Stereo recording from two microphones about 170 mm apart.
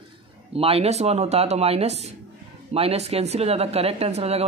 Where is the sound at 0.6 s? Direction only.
35° right (ahead or behind).